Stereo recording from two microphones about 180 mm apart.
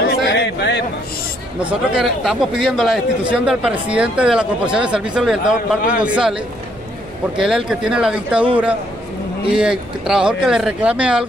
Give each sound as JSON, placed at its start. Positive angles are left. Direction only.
{"t": 0.2, "sound": "a sound", "side_deg": 70}
{"t": 1.6, "sound": "speech", "side_deg": -5}
{"t": 9.5, "sound": "speech", "side_deg": -5}